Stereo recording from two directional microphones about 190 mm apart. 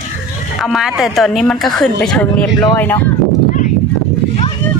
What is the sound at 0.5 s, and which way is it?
Speech, centre (ahead or behind).